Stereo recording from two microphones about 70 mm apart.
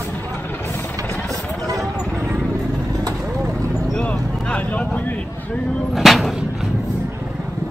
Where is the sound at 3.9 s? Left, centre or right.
Centre.